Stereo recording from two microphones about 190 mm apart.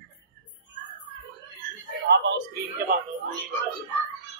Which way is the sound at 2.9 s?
50° right (ahead or behind).